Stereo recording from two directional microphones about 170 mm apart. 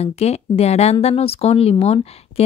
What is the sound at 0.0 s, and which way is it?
Speech, 40° left (ahead or behind).